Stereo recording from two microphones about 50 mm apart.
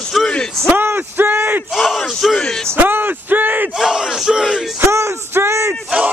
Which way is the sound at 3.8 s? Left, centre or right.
Centre.